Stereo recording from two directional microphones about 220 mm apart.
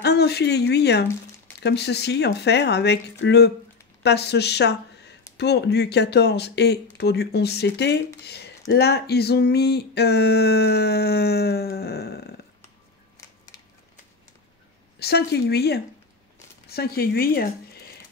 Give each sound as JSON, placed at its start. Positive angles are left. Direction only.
{"t": 0.0, "sound": "speech", "side_deg": 50}
{"t": 15.0, "sound": "speech", "side_deg": 45}